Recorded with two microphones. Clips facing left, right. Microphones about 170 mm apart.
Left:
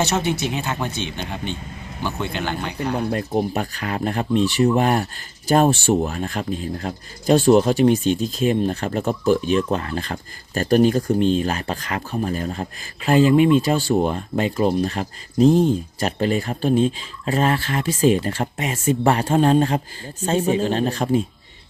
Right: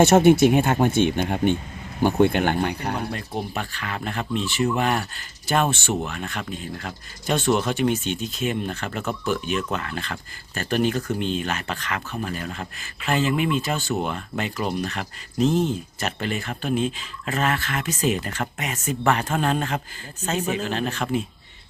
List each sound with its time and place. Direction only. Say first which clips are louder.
0.0 s speech: right 8 dB; 50° right (ahead or behind)
2.9 s speech: left 7 dB; 40° left (ahead or behind)